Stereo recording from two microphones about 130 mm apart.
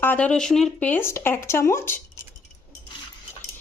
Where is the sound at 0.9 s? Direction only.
20° left (ahead or behind).